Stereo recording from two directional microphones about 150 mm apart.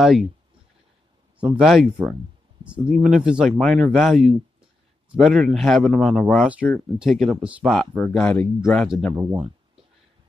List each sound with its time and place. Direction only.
0.0 s speech: centre (ahead or behind)
1.4 s speech: 5° right (ahead or behind)
9.1 s speech: 20° right (ahead or behind)